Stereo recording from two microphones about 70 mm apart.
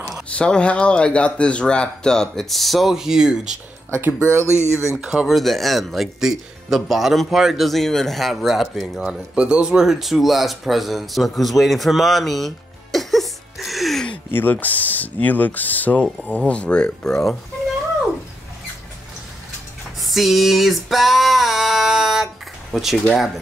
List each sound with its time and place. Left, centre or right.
0.3 s speech: centre
4.5 s speech: left
4.9 s speech: centre
9.0 s speech: centre
14.3 s speech: left; by 17.4 s centre
20.0 s a sound: centre